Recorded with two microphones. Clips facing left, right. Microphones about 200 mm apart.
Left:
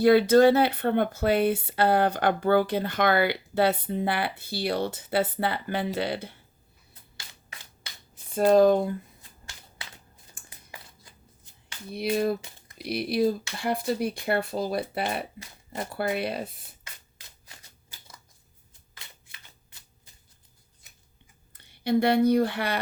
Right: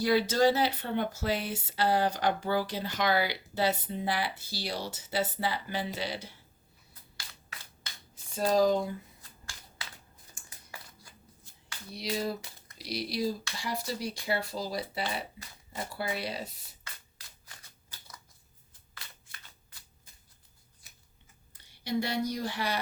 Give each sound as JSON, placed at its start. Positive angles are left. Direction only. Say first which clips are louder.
{"t": 0.0, "sound": "speech", "louder": "left 8 dB", "side_deg": 55}
{"t": 8.4, "sound": "speech", "louder": "left 7 dB", "side_deg": 55}
{"t": 11.9, "sound": "speech", "louder": "left 8 dB", "side_deg": 55}
{"t": 21.5, "sound": "speech", "louder": "left 8 dB", "side_deg": 60}